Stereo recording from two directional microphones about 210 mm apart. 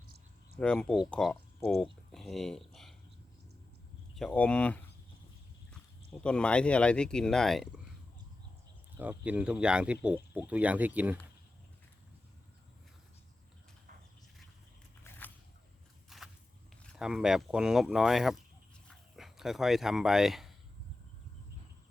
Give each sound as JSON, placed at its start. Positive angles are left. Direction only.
{"t": 0.6, "sound": "speech", "side_deg": 5}
{"t": 4.1, "sound": "speech", "side_deg": 0}
{"t": 6.1, "sound": "speech", "side_deg": 5}
{"t": 9.0, "sound": "speech", "side_deg": -5}
{"t": 16.0, "sound": "walk", "side_deg": 0}
{"t": 16.8, "sound": "speech", "side_deg": 0}